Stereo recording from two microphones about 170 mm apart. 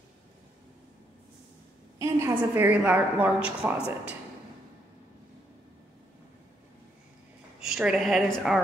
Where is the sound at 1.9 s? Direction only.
15° right (ahead or behind).